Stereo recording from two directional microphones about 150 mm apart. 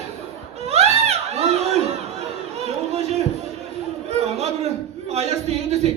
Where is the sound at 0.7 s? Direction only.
45° right (ahead or behind).